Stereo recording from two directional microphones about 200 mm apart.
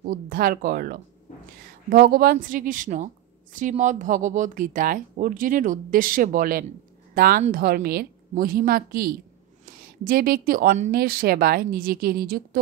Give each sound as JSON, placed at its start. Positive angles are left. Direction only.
{"t": 0.0, "sound": "a woman's voice", "side_deg": -45}